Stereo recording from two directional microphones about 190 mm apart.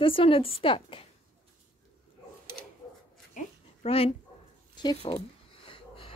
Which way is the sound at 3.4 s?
30° left (ahead or behind).